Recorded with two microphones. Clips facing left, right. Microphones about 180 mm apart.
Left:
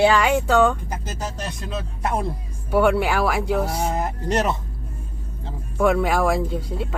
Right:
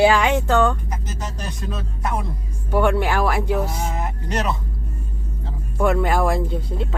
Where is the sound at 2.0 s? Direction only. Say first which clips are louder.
Left 2 dB; 30° left (ahead or behind).